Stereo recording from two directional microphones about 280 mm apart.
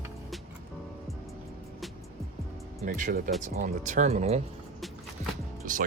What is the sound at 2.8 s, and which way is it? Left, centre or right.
Speech, right.